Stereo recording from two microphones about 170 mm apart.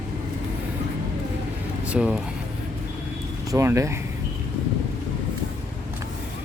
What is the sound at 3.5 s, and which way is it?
Speech, 15° right (ahead or behind).